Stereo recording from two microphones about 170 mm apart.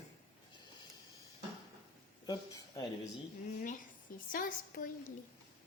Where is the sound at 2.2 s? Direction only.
20° left (ahead or behind).